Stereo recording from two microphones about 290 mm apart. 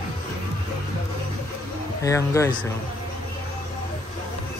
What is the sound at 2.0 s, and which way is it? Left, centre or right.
Speech, centre.